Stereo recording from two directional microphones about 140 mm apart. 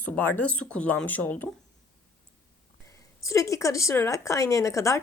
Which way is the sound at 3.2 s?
20° left (ahead or behind).